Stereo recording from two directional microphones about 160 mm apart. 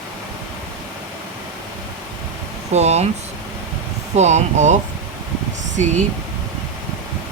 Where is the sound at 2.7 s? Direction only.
45° right (ahead or behind).